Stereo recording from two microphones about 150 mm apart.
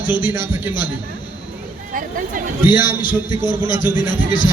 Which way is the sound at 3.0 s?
30° left (ahead or behind).